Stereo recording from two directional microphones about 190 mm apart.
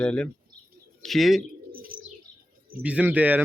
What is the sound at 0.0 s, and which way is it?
Speech, 5° left (ahead or behind).